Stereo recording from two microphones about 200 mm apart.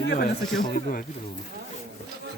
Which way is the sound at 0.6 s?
45° left (ahead or behind).